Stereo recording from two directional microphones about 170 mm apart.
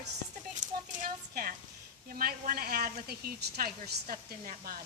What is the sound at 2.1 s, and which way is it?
A woman's voice, 60° right (ahead or behind).